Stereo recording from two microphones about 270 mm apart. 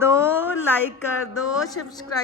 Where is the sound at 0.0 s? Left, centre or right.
Centre.